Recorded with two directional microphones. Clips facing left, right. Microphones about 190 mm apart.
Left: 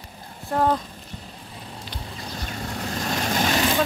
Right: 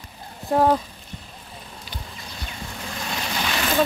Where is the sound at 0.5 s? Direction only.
10° right (ahead or behind).